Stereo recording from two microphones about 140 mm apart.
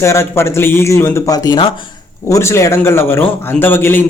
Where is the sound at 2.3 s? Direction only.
20° left (ahead or behind).